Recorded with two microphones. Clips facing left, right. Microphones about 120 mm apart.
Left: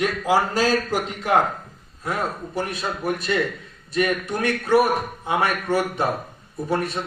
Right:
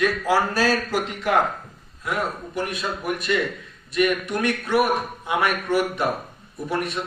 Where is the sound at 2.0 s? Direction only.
35° left (ahead or behind).